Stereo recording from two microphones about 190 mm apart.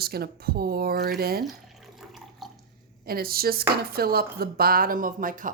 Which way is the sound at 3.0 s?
50° right (ahead or behind).